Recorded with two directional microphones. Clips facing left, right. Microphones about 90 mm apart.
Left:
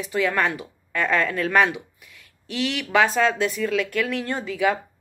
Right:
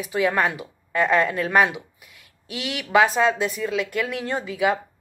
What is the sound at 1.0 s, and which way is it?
Speech, 20° right (ahead or behind).